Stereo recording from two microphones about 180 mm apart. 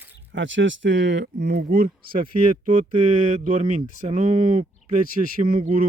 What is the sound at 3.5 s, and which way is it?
Speech, 35° right (ahead or behind).